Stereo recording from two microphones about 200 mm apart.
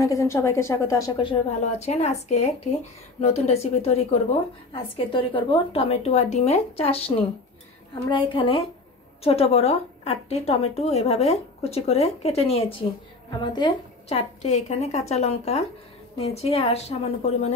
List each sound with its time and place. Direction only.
0.0 s a woman's voice: 15° left (ahead or behind)
8.3 s a woman's voice: 25° left (ahead or behind)